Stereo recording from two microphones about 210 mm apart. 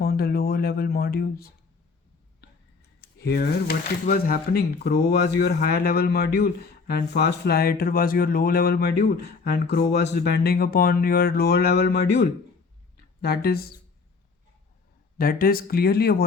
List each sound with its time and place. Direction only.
0.0 s speech: 45° left (ahead or behind)
3.2 s speech: 50° left (ahead or behind)
15.2 s speech: 45° left (ahead or behind)